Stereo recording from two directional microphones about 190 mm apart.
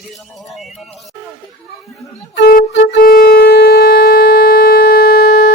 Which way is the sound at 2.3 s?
55° left (ahead or behind).